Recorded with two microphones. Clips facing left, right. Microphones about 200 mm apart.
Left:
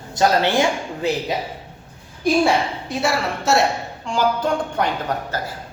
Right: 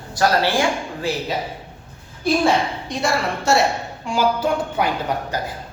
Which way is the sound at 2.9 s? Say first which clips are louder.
Even; 5° left (ahead or behind).